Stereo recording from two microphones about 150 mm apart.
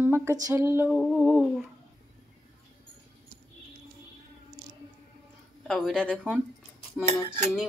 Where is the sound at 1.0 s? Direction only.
5° left (ahead or behind).